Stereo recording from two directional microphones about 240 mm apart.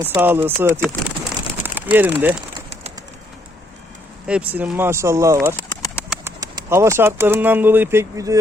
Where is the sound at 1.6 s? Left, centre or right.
Centre.